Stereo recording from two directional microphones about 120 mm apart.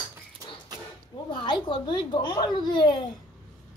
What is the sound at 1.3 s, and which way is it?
A child's voice, 40° left (ahead or behind).